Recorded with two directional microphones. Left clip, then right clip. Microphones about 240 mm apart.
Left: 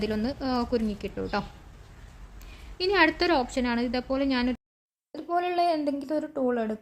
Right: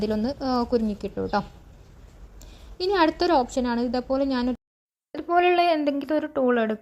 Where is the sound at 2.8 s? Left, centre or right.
Centre.